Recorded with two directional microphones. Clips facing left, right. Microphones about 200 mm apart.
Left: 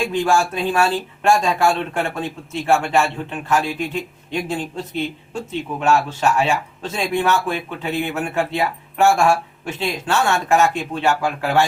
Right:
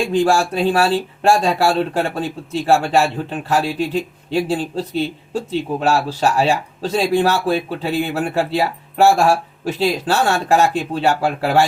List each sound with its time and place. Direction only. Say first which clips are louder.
0.1 s a man's voice: right 3 dB; 35° right (ahead or behind)